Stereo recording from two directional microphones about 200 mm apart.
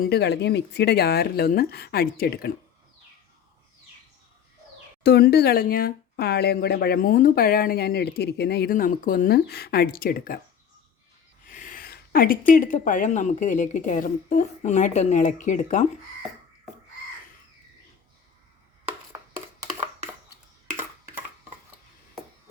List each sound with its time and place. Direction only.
0.0 s speech: 55° left (ahead or behind)
5.0 s speech: 55° left (ahead or behind)
11.4 s a sound: 40° left (ahead or behind)
12.5 s a woman's voice: 40° left (ahead or behind)